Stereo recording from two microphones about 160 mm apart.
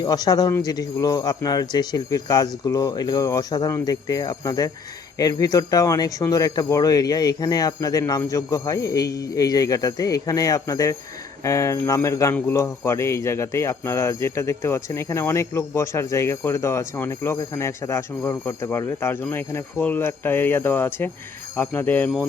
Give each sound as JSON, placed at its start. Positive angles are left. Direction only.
{"t": 0.0, "sound": "a man's voice", "side_deg": 25}